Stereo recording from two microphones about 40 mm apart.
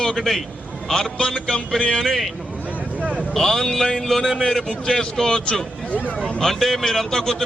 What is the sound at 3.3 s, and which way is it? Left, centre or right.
A man's voice, centre.